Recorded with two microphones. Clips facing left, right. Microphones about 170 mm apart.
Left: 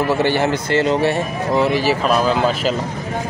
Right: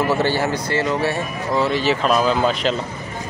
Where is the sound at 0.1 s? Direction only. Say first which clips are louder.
Left 2 dB; 15° left (ahead or behind).